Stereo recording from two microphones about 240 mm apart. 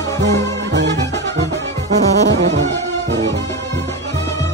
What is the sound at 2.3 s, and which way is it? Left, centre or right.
Music, right.